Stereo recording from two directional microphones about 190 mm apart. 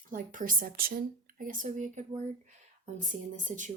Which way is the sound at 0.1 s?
45° right (ahead or behind).